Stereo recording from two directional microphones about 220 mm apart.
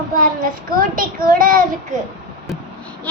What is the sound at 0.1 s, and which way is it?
A child's voice, 35° right (ahead or behind).